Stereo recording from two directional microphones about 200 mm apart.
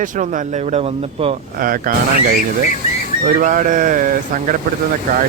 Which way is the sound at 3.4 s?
40° right (ahead or behind).